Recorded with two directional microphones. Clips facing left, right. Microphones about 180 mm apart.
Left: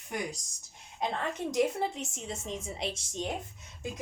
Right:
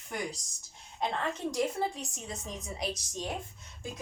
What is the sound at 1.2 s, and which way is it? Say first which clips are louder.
A woman's voice: left 4 dB; 20° left (ahead or behind).